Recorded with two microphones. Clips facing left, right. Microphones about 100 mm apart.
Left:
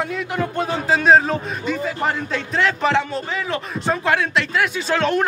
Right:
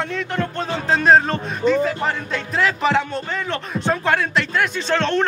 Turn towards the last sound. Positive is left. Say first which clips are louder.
# even
turn(degrees=10)  # may be behind; listen again after turning